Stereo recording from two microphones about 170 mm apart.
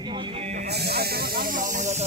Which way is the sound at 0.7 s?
70° right (ahead or behind).